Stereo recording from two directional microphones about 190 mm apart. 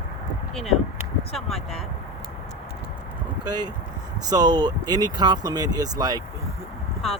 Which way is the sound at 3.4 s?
20° right (ahead or behind).